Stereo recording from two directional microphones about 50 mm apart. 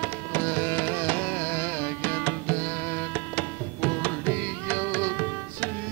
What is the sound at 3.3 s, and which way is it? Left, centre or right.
Carnatic music, left.